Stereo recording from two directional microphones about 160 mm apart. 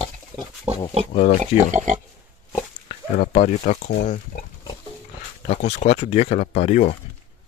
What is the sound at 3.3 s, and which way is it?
Speech, 55° left (ahead or behind).